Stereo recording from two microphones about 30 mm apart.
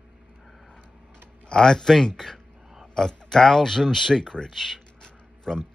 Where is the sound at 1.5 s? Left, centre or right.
Left.